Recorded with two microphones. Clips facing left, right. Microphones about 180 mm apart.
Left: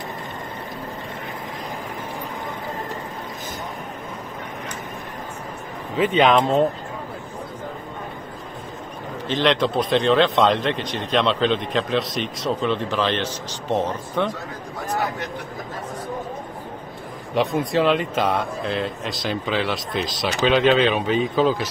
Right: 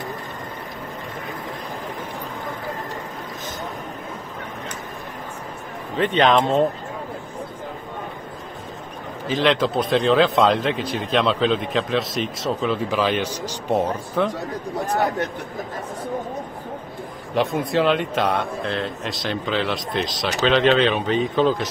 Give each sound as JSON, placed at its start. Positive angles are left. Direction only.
{"t": 5.9, "sound": "speech", "side_deg": 5}
{"t": 9.3, "sound": "a man's voice", "side_deg": 0}
{"t": 17.3, "sound": "speech", "side_deg": 0}